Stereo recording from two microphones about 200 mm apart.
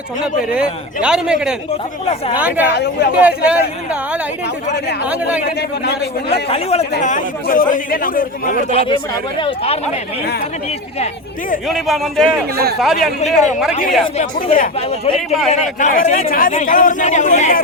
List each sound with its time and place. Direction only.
1.0 s speech: 5° right (ahead or behind)
2.6 s speech: 55° left (ahead or behind)
3.2 s speech: 5° right (ahead or behind)
5.5 s speech: 55° left (ahead or behind)
6.5 s speech: 30° left (ahead or behind)
8.7 s speech: 30° left (ahead or behind)
11.7 s speech: centre (ahead or behind)
14.2 s speech: 45° left (ahead or behind)